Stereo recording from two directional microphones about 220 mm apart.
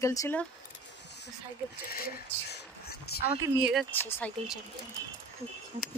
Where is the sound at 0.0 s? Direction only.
15° left (ahead or behind).